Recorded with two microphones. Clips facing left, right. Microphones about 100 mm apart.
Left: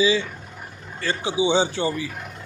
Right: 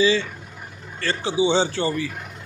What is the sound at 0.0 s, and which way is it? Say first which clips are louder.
A man's voice: right 1 dB; 10° left (ahead or behind).